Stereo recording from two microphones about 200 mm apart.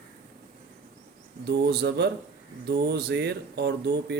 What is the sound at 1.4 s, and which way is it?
Speech, 55° right (ahead or behind).